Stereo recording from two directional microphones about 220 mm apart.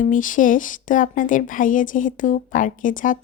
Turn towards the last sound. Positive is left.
turn(degrees=35)  # may be behind; listen again after turning